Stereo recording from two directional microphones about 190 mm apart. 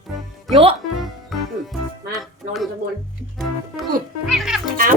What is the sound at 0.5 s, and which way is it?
Speech, 30° right (ahead or behind).